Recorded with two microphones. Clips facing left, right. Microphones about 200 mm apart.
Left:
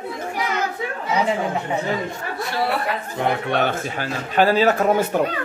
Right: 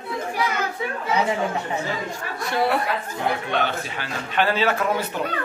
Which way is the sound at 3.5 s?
50° left (ahead or behind).